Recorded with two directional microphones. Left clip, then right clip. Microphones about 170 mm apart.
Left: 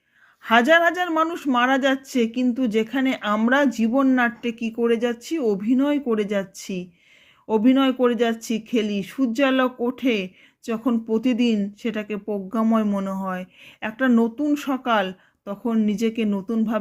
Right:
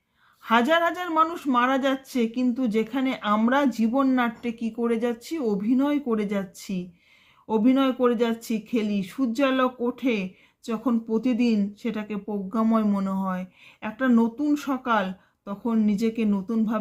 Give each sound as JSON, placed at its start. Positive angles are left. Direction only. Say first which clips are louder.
{"t": 0.4, "sound": "speech", "louder": "left 5 dB", "side_deg": 30}